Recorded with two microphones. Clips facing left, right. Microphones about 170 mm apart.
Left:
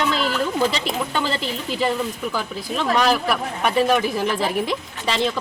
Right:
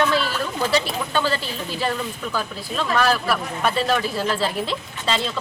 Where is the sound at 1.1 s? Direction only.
15° left (ahead or behind).